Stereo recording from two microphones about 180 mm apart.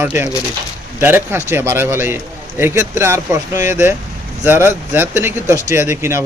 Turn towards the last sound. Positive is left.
turn(degrees=-15)  # may be behind; listen again after turning